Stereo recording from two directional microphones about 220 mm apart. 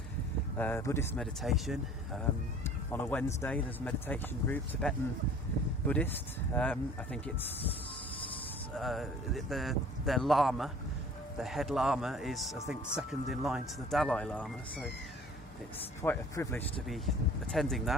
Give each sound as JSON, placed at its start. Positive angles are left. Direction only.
{"t": 0.5, "sound": "speech", "side_deg": 10}
{"t": 1.2, "sound": "speech", "side_deg": 0}
{"t": 8.7, "sound": "speech", "side_deg": 0}
{"t": 16.0, "sound": "speech", "side_deg": 15}